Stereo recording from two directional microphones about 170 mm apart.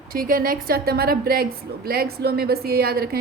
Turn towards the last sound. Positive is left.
turn(degrees=-65)  # may be behind; listen again after turning